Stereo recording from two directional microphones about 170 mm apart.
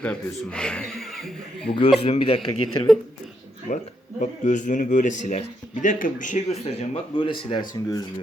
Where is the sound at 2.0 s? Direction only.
30° left (ahead or behind).